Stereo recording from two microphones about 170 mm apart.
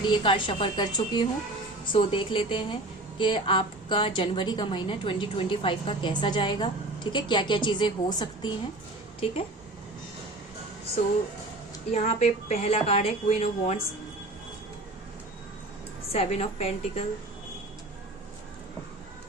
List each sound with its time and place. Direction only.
0.1 s a woman's voice: 30° left (ahead or behind)
11.9 s a woman's voice: 40° left (ahead or behind)
16.1 s a woman's voice: 40° left (ahead or behind)